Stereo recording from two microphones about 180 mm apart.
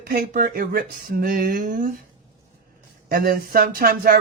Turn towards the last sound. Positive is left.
turn(degrees=-55)  # may be behind; listen again after turning